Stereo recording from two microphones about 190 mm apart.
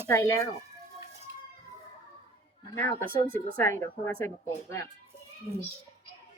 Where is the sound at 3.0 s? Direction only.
50° right (ahead or behind).